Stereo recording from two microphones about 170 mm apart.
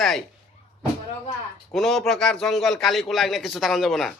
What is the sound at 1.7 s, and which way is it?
A man's voice, centre (ahead or behind).